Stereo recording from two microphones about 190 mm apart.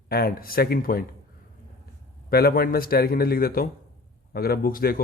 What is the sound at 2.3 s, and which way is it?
Speech, 55° left (ahead or behind).